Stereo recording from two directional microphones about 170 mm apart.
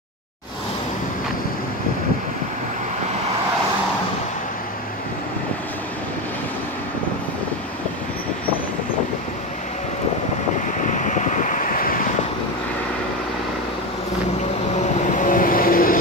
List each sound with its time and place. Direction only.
10.9 s vehicle: 45° left (ahead or behind)
15.0 s vehicle: 50° left (ahead or behind)